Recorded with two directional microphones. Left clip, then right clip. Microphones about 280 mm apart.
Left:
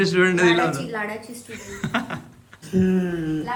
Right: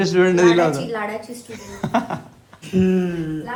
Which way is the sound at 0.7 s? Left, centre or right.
Centre.